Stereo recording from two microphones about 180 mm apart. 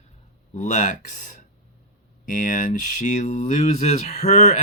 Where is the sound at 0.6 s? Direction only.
40° left (ahead or behind).